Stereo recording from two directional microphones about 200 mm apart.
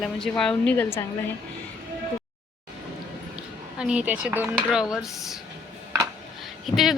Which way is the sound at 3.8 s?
5° right (ahead or behind).